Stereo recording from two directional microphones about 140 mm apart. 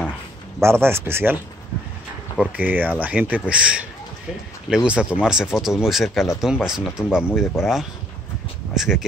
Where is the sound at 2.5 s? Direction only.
10° right (ahead or behind).